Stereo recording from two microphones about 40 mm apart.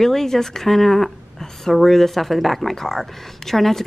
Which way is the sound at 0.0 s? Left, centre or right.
Centre.